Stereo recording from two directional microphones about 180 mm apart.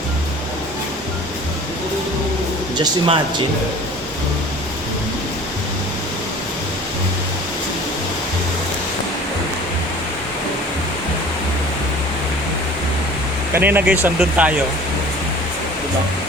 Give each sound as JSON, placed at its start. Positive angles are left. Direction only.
{"t": 2.7, "sound": "speech", "side_deg": -25}
{"t": 13.5, "sound": "speech", "side_deg": -10}